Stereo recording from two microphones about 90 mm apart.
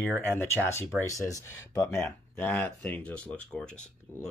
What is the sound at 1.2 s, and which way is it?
Speech, 35° left (ahead or behind).